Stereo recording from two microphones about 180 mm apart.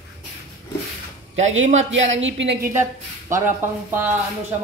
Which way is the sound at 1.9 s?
90° right.